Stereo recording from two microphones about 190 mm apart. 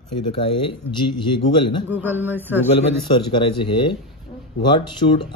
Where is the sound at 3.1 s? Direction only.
25° left (ahead or behind).